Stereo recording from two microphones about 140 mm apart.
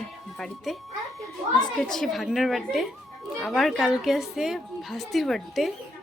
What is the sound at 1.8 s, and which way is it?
A woman's voice, centre (ahead or behind).